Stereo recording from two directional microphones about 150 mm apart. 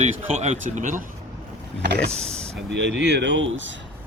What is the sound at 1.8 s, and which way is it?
Speech, 90° right.